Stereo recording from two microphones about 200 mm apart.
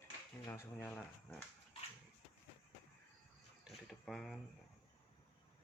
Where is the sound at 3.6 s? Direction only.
Centre (ahead or behind).